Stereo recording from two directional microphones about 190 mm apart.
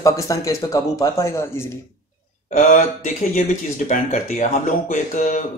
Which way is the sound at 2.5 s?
45° left (ahead or behind).